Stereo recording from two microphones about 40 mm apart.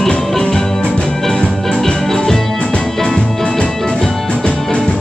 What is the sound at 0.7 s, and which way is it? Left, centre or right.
Music, left.